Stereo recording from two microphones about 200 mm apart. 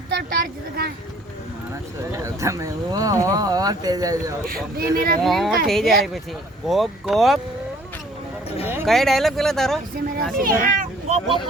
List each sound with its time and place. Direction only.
0.1 s speech: 50° right (ahead or behind)
2.1 s speech: 15° right (ahead or behind)
4.4 s speech: 45° right (ahead or behind)
5.2 s speech: centre (ahead or behind)
8.6 s a sound: 10° right (ahead or behind)
8.9 s speech: centre (ahead or behind)
10.4 s speech: 45° right (ahead or behind)